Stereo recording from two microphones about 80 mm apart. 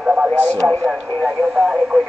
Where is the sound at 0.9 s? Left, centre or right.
Centre.